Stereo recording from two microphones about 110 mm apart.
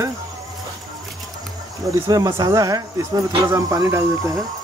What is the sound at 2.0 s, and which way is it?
Speech, 35° right (ahead or behind).